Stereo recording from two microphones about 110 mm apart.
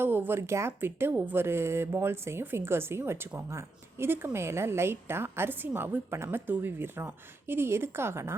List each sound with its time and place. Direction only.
0.0 s speech: 20° right (ahead or behind)